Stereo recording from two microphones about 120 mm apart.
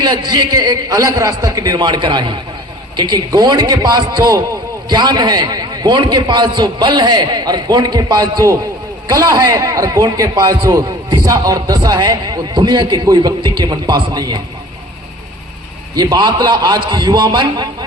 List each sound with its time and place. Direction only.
0.0 s a man's voice: 35° right (ahead or behind)
16.0 s a man's voice: 35° right (ahead or behind)